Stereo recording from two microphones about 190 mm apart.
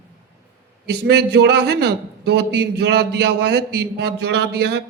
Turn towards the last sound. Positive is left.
turn(degrees=-60)  # may be behind; listen again after turning